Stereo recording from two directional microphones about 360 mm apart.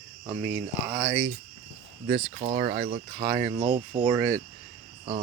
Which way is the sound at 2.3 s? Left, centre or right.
Centre.